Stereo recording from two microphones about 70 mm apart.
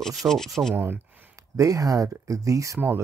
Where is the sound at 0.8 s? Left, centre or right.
Right.